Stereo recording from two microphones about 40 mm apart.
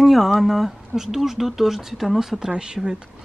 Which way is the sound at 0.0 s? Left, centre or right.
Centre.